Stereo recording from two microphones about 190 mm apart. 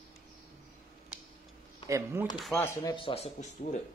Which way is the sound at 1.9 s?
15° right (ahead or behind).